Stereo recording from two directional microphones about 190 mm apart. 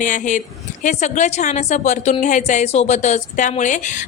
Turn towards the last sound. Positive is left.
turn(degrees=40)  # may be behind; listen again after turning